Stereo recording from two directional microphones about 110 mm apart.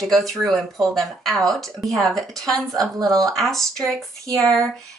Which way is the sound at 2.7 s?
30° right (ahead or behind).